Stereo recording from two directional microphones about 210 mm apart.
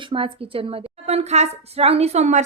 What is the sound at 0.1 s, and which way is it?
A woman's voice, 25° right (ahead or behind).